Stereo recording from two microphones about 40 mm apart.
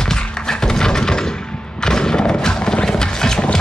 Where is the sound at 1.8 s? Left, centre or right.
Centre.